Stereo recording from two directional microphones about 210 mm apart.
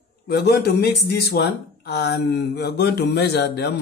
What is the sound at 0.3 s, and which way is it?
Speech, 50° left (ahead or behind).